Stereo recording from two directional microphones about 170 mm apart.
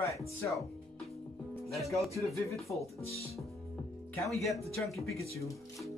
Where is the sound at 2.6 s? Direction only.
Centre (ahead or behind).